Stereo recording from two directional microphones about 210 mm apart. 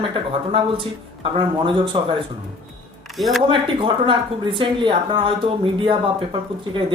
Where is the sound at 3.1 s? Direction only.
Centre (ahead or behind).